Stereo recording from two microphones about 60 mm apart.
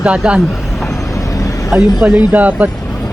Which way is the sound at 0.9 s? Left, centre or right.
Left.